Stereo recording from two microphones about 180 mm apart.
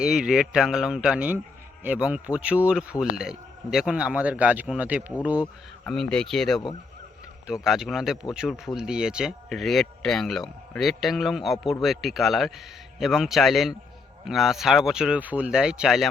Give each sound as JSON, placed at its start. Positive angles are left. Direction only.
{"t": 0.0, "sound": "speech", "side_deg": -5}
{"t": 5.8, "sound": "speech", "side_deg": 5}